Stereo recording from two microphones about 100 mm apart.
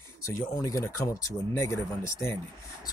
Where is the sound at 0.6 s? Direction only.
35° left (ahead or behind).